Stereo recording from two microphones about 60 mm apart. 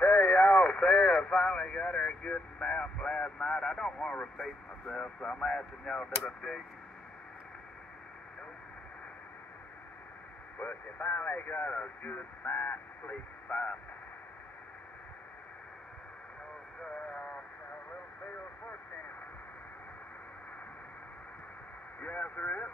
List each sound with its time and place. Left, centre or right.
0.1 s a sound: centre
0.7 s radio: centre
4.4 s speech: centre
10.6 s speech: left
16.8 s speech: centre
22.0 s speech: left